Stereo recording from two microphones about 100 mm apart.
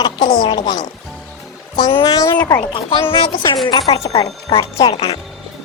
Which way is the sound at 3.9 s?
90° left.